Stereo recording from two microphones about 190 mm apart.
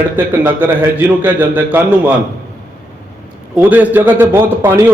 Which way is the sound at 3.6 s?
10° right (ahead or behind).